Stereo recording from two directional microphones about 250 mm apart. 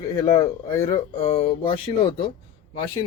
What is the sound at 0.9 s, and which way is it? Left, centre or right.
Speech, left.